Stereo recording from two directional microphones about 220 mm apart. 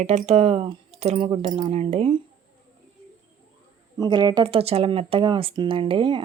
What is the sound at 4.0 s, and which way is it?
Speech, 20° right (ahead or behind).